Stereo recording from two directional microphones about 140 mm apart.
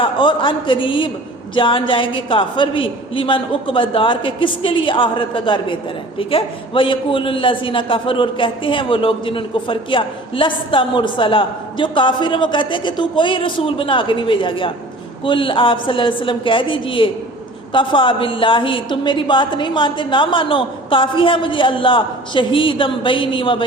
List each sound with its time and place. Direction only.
0.0 s a man's voice: 35° left (ahead or behind)